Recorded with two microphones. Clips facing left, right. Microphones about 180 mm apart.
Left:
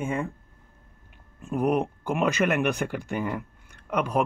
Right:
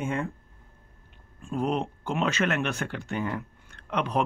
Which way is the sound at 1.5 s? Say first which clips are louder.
Left 4 dB; 15° left (ahead or behind).